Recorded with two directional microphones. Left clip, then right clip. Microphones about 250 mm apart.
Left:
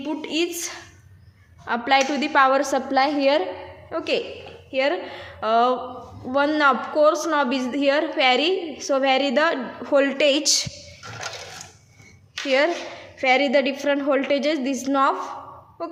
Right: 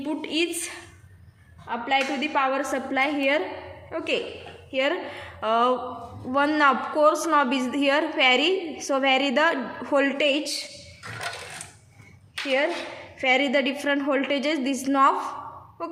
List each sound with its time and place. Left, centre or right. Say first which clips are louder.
0.0 s a woman's voice: left 1 dB; centre
1.6 s a woman's voice: left 5 dB; left; by 10.4 s centre
12.3 s a woman's voice: left 4 dB; centre